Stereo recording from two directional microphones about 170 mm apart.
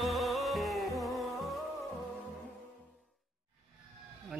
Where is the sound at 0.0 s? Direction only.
Centre (ahead or behind).